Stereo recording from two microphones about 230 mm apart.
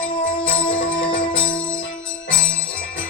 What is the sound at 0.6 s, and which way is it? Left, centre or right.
Music, left.